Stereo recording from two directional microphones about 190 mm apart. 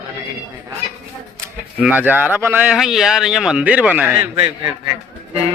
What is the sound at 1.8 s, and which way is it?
A man's voice, 10° right (ahead or behind).